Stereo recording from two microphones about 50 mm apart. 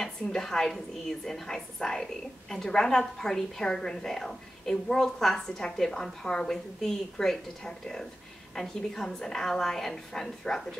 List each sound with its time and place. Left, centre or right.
0.0 s a woman's voice: centre